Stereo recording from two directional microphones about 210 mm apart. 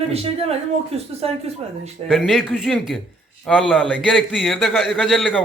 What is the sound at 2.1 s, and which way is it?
A man's voice, centre (ahead or behind).